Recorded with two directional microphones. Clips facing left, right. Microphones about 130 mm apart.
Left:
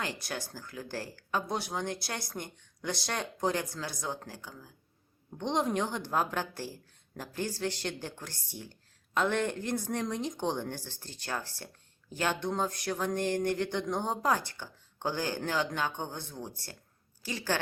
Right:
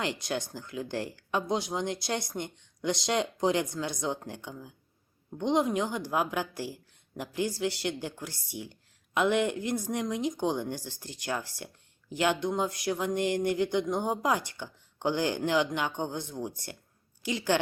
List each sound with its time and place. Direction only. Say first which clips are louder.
0.0 s speech: right 5 dB; 20° right (ahead or behind)
5.4 s speech: right 3 dB; 10° right (ahead or behind)